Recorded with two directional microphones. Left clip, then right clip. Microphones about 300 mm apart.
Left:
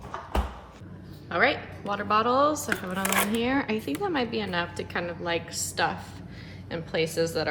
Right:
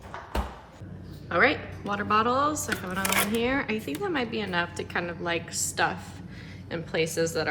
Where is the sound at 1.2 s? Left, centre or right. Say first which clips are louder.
Right 1 dB; centre.